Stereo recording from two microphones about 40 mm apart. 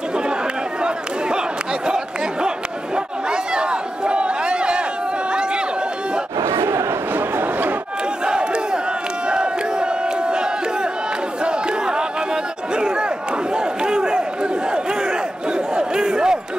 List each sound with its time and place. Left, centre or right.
3.3 s a sound: right
5.3 s chatter: right
7.2 s a sound: right
9.3 s crowd: right
11.4 s battle cry: centre
12.7 s crowd: right